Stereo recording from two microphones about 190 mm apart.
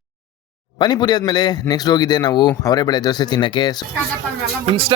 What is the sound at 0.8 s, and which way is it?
A man's voice, 25° left (ahead or behind).